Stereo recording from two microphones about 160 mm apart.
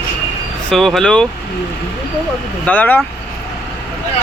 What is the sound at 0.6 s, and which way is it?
Speech, centre (ahead or behind).